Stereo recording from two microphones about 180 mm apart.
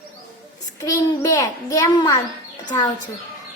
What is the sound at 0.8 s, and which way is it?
A child's voice, 20° left (ahead or behind).